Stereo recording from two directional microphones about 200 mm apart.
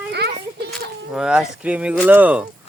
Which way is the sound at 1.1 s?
5° right (ahead or behind).